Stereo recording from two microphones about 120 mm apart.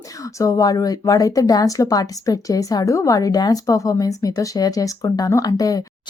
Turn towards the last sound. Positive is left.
turn(degrees=30)  # may be behind; listen again after turning